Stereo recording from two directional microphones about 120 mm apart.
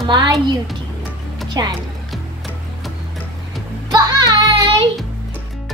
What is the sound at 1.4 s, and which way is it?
Music, 35° right (ahead or behind).